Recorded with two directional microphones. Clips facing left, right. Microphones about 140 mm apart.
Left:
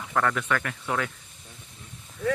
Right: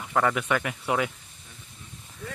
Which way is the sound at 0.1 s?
10° right (ahead or behind).